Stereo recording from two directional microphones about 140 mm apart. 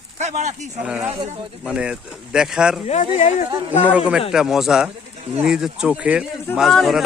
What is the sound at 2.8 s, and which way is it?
Speech, 55° left (ahead or behind).